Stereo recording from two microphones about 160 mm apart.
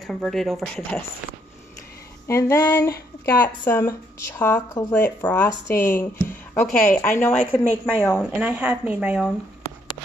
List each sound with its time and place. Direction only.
0.0 s speech: centre (ahead or behind)
2.2 s speech: 15° left (ahead or behind)
8.3 s speech: 10° right (ahead or behind)